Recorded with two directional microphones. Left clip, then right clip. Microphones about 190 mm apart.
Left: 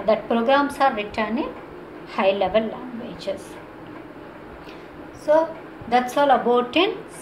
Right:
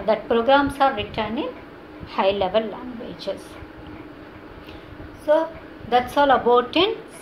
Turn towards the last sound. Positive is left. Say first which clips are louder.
# right 1 dB
turn(degrees=-20)  # may be behind; listen again after turning